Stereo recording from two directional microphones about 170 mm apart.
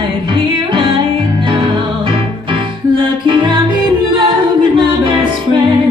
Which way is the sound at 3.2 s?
30° right (ahead or behind).